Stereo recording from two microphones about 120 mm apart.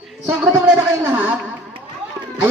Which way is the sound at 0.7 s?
15° right (ahead or behind).